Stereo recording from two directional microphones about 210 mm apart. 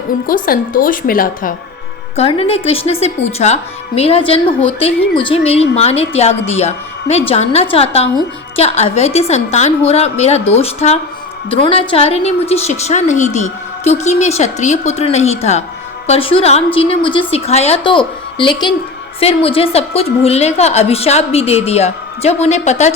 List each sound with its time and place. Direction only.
0.3 s a woman's voice: 40° left (ahead or behind)
2.1 s a woman's voice: 30° left (ahead or behind)